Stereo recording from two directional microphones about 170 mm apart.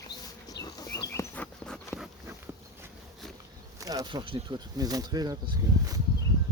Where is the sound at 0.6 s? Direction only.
20° left (ahead or behind).